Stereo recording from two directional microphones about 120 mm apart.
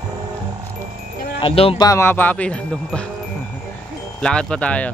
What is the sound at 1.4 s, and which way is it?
Speech, 50° left (ahead or behind).